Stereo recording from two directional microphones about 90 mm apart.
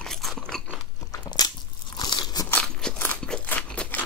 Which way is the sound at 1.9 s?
50° left (ahead or behind).